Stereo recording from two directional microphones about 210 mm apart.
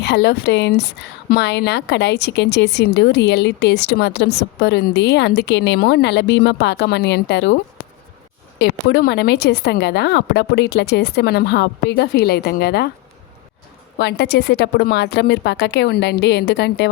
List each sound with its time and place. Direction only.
0.0 s a woman's voice: 55° left (ahead or behind)
14.0 s a woman's voice: 50° left (ahead or behind)